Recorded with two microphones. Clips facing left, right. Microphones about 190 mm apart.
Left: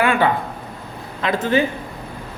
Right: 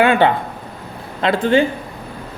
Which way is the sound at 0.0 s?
30° right (ahead or behind).